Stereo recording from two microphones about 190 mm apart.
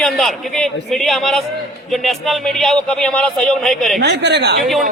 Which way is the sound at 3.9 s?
60° right (ahead or behind).